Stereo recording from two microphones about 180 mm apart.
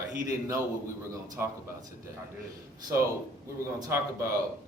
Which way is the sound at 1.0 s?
15° right (ahead or behind).